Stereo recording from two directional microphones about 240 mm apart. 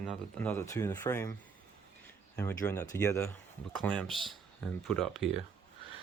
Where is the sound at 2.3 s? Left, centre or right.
Centre.